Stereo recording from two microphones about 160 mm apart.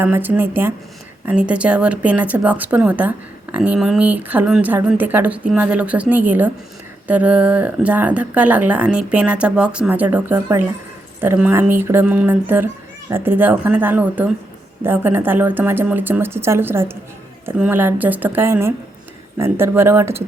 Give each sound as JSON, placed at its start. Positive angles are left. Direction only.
{"t": 0.0, "sound": "speech", "side_deg": -10}